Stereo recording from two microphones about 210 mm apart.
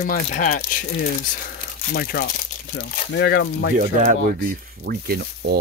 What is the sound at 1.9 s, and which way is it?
Speech, 45° left (ahead or behind).